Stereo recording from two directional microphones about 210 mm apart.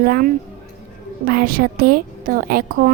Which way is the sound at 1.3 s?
45° right (ahead or behind).